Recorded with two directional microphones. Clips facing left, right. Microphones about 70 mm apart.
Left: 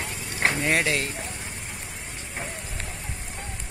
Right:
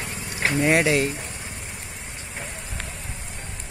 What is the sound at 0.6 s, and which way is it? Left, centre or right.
Speech, centre.